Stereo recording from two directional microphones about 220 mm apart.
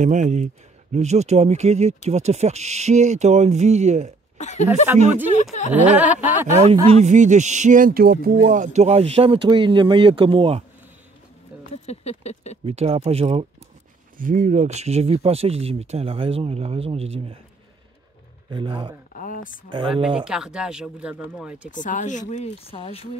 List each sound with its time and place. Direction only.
0.0 s speech: 35° right (ahead or behind)
4.4 s speech: 30° left (ahead or behind)
5.7 s a sound: 5° right (ahead or behind)
6.5 s speech: 25° right (ahead or behind)
11.7 s patter: 30° left (ahead or behind)
12.6 s speech: 25° right (ahead or behind)
14.1 s speech: 40° right (ahead or behind)
18.5 s speech: 20° right (ahead or behind)
19.1 s speech: 35° left (ahead or behind)
19.7 s speech: 20° right (ahead or behind)
20.2 s speech: centre (ahead or behind)
21.6 s speech: 35° left (ahead or behind)